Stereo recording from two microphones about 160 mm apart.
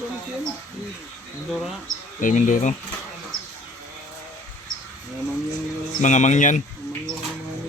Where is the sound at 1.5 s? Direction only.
Centre (ahead or behind).